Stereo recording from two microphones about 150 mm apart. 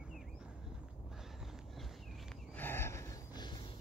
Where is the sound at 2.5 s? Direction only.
15° left (ahead or behind).